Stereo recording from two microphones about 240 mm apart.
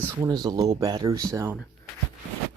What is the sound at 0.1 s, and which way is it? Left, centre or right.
Speech, centre.